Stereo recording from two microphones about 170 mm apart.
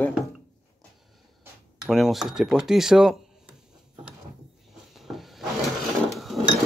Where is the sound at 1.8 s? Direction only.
Centre (ahead or behind).